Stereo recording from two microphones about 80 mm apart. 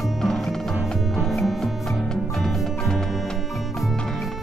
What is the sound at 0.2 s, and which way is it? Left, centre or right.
Music, centre.